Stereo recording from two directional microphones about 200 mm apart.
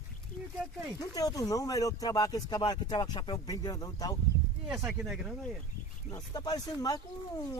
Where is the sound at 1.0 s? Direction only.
20° left (ahead or behind).